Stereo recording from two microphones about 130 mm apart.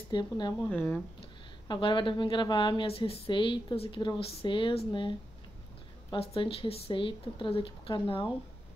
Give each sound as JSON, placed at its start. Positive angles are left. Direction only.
{"t": 0.1, "sound": "a woman's voice", "side_deg": 35}
{"t": 0.7, "sound": "speech", "side_deg": 15}
{"t": 1.7, "sound": "a woman's voice", "side_deg": 40}
{"t": 6.1, "sound": "speech", "side_deg": 45}